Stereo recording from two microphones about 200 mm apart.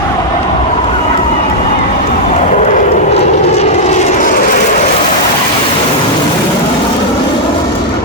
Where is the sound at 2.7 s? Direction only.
30° left (ahead or behind).